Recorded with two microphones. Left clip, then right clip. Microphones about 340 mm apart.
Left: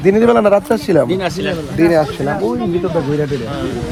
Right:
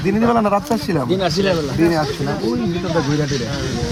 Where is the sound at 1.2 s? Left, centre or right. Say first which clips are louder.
Right 1 dB; left.